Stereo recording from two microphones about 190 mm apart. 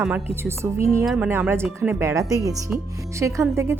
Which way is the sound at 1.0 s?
Centre (ahead or behind).